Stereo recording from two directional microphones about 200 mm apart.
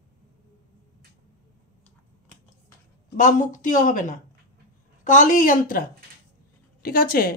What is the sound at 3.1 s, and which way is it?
Speech, 40° left (ahead or behind).